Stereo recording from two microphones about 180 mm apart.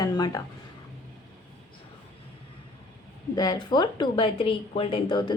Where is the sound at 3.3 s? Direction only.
20° left (ahead or behind).